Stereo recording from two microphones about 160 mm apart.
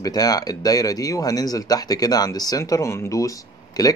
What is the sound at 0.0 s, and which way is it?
Speech, 25° left (ahead or behind).